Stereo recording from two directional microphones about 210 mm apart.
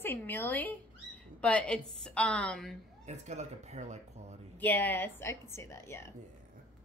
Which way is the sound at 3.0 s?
35° right (ahead or behind).